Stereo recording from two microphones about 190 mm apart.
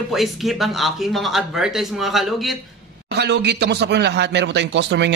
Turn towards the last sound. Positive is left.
turn(degrees=-65)  # may be behind; listen again after turning